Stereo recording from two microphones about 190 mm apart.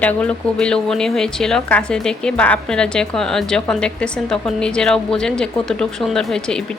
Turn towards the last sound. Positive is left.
turn(degrees=5)  # may be behind; listen again after turning